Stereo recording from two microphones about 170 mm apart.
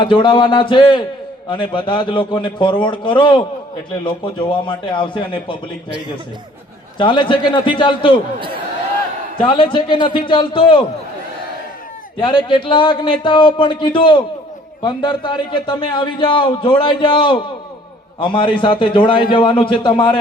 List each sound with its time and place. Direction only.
0.0 s a man's voice: 30° left (ahead or behind)
7.0 s a man's voice: 30° left (ahead or behind)
9.4 s a man's voice: 30° left (ahead or behind)
12.2 s a man's voice: 30° left (ahead or behind)